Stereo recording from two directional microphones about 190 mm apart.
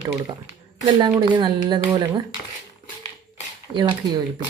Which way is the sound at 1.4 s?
25° right (ahead or behind).